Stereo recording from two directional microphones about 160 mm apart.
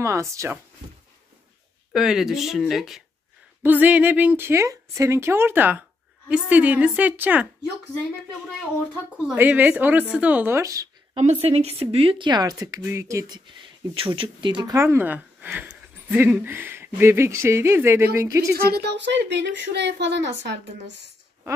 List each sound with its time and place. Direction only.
0.0 s a woman's voice: 20° right (ahead or behind)
1.9 s a woman's voice: centre (ahead or behind)
9.3 s a woman's voice: 10° right (ahead or behind)
11.1 s speech: 40° right (ahead or behind); by 13.4 s 20° right (ahead or behind)
13.9 s speech: 35° right (ahead or behind)
14.8 s speech: 15° right (ahead or behind)
18.5 s speech: 80° right